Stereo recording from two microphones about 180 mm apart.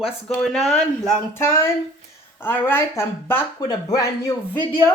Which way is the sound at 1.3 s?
15° left (ahead or behind).